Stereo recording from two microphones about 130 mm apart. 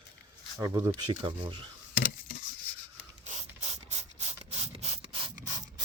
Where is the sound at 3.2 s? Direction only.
55° right (ahead or behind).